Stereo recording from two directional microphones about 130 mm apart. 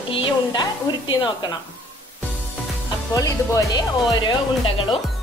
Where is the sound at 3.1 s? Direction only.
25° left (ahead or behind).